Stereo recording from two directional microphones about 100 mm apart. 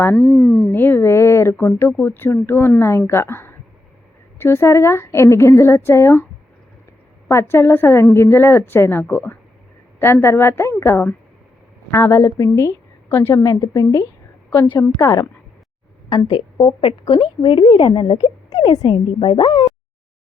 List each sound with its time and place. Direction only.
0.2 s speech: 10° left (ahead or behind)
0.7 s speech: 20° left (ahead or behind)
7.3 s a woman's voice: 25° left (ahead or behind)
16.0 s a woman's voice: 45° left (ahead or behind)